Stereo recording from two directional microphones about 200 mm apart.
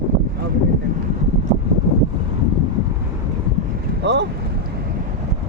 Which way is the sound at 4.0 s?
60° right (ahead or behind).